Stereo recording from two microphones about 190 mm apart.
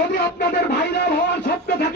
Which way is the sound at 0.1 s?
60° left (ahead or behind).